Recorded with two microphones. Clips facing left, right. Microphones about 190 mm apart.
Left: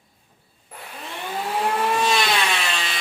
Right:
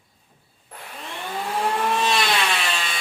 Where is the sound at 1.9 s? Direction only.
Centre (ahead or behind).